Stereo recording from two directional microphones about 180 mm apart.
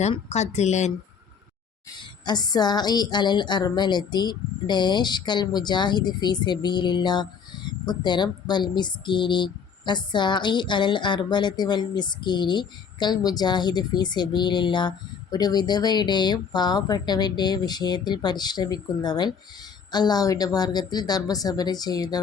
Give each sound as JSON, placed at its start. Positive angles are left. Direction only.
{"t": 0.0, "sound": "speech", "side_deg": 40}
{"t": 2.0, "sound": "a woman's voice", "side_deg": 25}